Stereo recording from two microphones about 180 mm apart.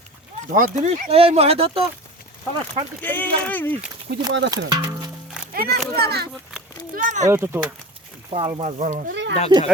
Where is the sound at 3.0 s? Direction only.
10° left (ahead or behind).